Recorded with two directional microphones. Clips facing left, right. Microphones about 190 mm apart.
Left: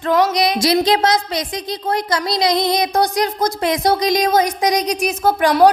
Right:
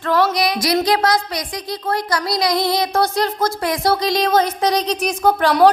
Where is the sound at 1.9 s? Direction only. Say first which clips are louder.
Left 1 dB; 25° left (ahead or behind).